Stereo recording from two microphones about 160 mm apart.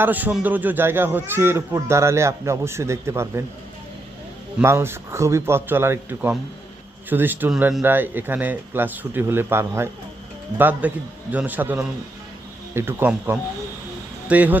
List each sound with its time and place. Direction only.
0.0 s a man's voice: 10° right (ahead or behind)
4.6 s a man's voice: 15° right (ahead or behind)